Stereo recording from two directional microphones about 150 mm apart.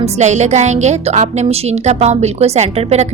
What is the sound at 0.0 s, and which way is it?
Speech, 50° right (ahead or behind).